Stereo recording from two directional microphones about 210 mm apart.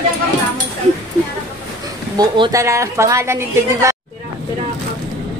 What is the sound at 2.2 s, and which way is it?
A woman's voice, 20° right (ahead or behind).